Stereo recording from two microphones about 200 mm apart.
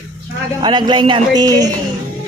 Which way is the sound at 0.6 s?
20° right (ahead or behind).